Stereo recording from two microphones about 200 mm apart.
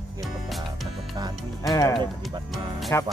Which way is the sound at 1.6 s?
15° left (ahead or behind).